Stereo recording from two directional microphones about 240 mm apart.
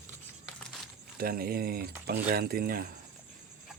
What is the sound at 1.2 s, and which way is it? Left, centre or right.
Speech, right.